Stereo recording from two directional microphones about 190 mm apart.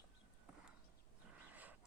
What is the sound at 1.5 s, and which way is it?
Wild animals, 10° right (ahead or behind).